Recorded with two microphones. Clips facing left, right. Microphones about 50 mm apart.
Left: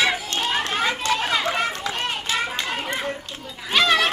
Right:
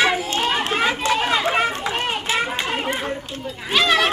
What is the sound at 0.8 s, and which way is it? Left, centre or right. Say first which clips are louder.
Run: right 4 dB; centre.